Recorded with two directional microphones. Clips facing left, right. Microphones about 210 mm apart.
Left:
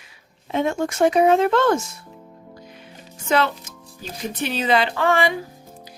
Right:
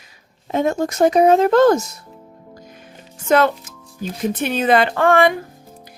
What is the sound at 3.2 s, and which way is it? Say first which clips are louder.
A woman's voice: right 5 dB; 50° right (ahead or behind).